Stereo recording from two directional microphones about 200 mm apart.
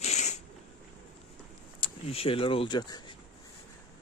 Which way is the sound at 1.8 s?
30° left (ahead or behind).